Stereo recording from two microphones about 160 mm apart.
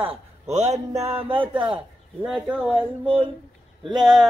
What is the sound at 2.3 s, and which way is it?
Speech, 5° right (ahead or behind).